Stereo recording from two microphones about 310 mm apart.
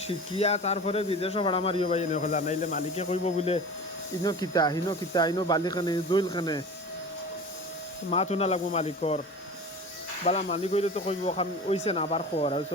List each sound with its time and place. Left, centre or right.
0.1 s speech: centre
8.1 s speech: centre
10.2 s speech: centre